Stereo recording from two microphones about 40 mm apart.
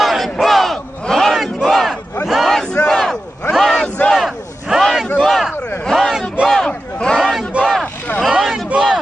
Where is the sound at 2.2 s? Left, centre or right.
Centre.